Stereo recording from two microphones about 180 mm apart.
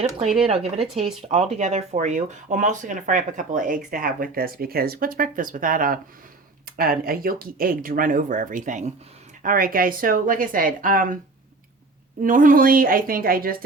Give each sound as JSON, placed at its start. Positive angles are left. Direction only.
{"t": 0.0, "sound": "speech", "side_deg": -35}
{"t": 12.2, "sound": "speech", "side_deg": -50}